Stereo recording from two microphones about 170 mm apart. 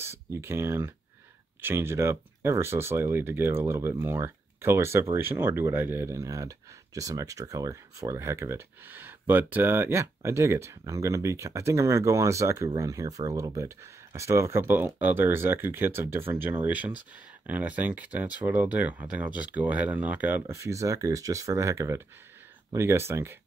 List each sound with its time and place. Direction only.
0.0 s speech: 15° right (ahead or behind)